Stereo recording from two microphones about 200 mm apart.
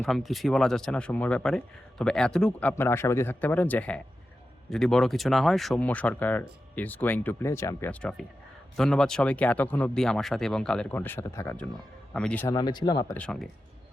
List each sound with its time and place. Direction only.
0.0 s speech: centre (ahead or behind)
12.5 s speech: 20° left (ahead or behind)
13.1 s speech: 5° left (ahead or behind)